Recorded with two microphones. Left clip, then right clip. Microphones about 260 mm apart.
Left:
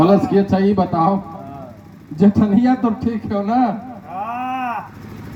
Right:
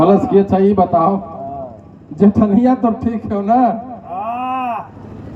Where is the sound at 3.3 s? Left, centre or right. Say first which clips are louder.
Right 5 dB; left.